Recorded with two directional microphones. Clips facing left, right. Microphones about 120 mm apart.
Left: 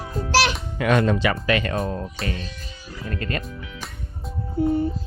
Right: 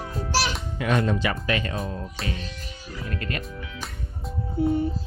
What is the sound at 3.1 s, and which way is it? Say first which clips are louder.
Speech: left 4 dB; 35° left (ahead or behind).